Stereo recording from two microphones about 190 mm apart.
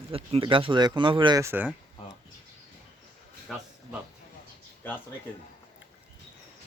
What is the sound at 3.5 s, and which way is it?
Speech, centre (ahead or behind).